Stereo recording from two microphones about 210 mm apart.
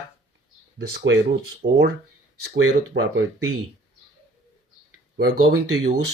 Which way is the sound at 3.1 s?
65° right (ahead or behind).